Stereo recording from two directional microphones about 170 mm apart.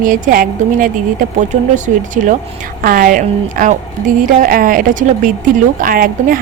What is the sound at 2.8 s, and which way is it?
A woman's voice, 55° right (ahead or behind).